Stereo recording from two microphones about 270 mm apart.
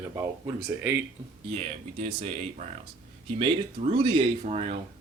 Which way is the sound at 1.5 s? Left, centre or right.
Right.